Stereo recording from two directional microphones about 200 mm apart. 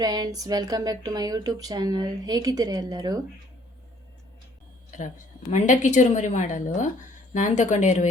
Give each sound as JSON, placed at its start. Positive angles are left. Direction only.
{"t": 0.0, "sound": "speech", "side_deg": -20}
{"t": 4.9, "sound": "a woman's voice", "side_deg": 40}